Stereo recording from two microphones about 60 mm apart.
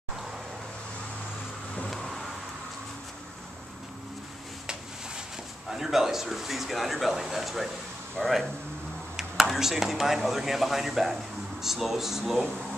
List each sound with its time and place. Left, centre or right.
1.9 s vehicle: centre
5.7 s a man's voice: centre